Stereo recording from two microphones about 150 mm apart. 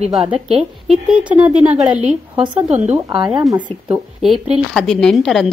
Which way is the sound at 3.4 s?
30° right (ahead or behind).